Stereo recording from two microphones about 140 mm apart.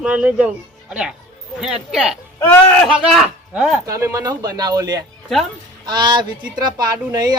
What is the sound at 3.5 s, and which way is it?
Speech, 10° right (ahead or behind).